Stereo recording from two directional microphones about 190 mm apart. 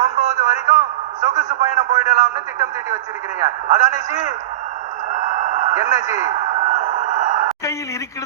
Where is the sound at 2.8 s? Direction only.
15° right (ahead or behind).